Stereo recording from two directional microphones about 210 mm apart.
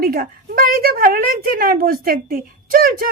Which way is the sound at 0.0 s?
45° right (ahead or behind).